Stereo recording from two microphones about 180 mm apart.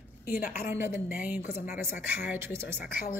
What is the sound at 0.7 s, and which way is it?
A woman's voice, 10° right (ahead or behind).